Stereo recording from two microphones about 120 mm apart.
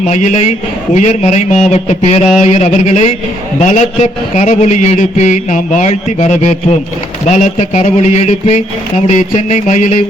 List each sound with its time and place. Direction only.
0.1 s a man's voice: 75° left (ahead or behind)
7.3 s a man's voice: 85° left; by 8.6 s 70° left (ahead or behind)
9.0 s mantra: 85° left